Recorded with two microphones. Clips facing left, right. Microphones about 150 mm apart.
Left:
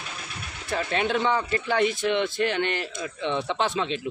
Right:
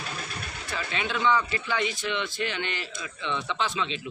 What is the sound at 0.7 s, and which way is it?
A man's voice, 50° left (ahead or behind).